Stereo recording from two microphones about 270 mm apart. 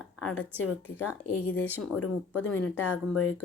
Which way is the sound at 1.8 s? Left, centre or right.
Left.